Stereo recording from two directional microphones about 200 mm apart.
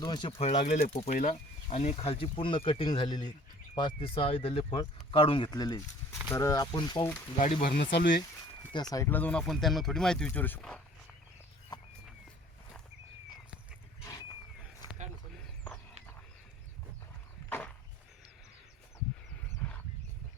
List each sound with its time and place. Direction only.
0.0 s speech: 20° left (ahead or behind)
7.3 s speech: 40° left (ahead or behind)
8.7 s speech: 20° left (ahead or behind); by 10.8 s 5° left (ahead or behind)
14.0 s a sound: 15° left (ahead or behind)